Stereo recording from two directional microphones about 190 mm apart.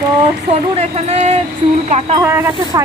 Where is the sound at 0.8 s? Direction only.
35° right (ahead or behind).